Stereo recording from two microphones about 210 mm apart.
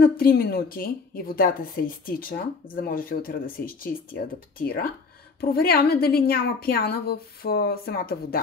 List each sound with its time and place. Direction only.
0.0 s a woman's voice: 45° left (ahead or behind)